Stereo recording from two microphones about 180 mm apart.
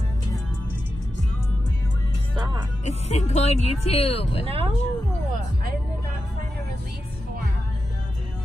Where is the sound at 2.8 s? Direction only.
40° left (ahead or behind).